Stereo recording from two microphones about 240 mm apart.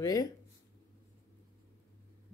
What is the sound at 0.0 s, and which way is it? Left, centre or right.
Speech, centre.